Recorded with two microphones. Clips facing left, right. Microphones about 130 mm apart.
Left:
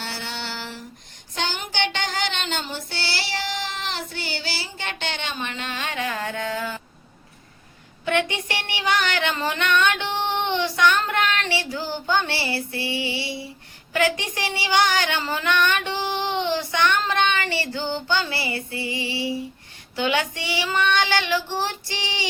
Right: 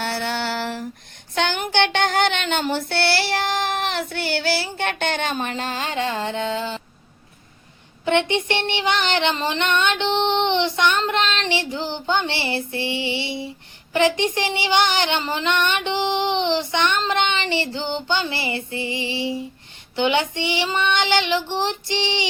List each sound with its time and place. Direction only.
0.0 s a sound: 60° right (ahead or behind)
1.4 s child singing: 60° right (ahead or behind); by 6.8 s 25° right (ahead or behind)
8.0 s female singing: 25° right (ahead or behind)